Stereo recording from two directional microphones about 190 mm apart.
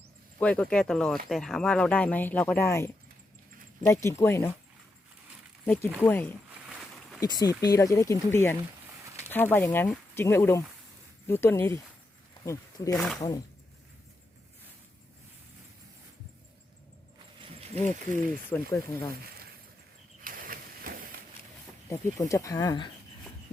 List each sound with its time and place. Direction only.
0.3 s speech: 5° left (ahead or behind)
5.6 s speech: 10° left (ahead or behind)
6.5 s a sound: centre (ahead or behind)
7.2 s speech: 20° left (ahead or behind)
18.1 s speech: 10° left (ahead or behind)
20.2 s a sound: 50° right (ahead or behind)
21.8 s speech: 15° left (ahead or behind)